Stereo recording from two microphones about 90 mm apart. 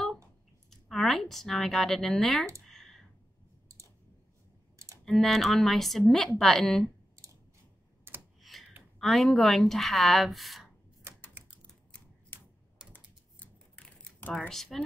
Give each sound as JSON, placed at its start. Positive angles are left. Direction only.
{"t": 0.7, "sound": "speech", "side_deg": 5}
{"t": 2.7, "sound": "clicking", "side_deg": 5}
{"t": 5.0, "sound": "a woman's voice", "side_deg": 5}
{"t": 8.1, "sound": "computer keyboard", "side_deg": -25}
{"t": 8.4, "sound": "a sound", "side_deg": 0}
{"t": 9.0, "sound": "a woman's voice", "side_deg": 0}
{"t": 12.9, "sound": "typing", "side_deg": 15}
{"t": 14.5, "sound": "a woman's voice", "side_deg": 5}